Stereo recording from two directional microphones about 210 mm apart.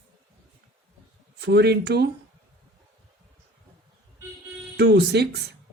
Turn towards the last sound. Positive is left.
turn(degrees=-50)  # may be behind; listen again after turning